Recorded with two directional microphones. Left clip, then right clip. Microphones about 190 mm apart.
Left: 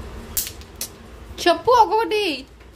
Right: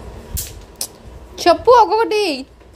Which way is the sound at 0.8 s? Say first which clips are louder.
Right 5 dB; 15° right (ahead or behind).